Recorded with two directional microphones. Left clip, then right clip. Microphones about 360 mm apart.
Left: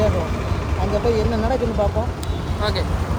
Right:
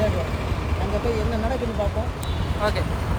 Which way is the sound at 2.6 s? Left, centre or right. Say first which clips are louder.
Left 1 dB; centre.